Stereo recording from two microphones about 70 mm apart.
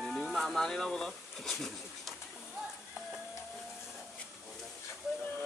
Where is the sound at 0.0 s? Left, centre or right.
Centre.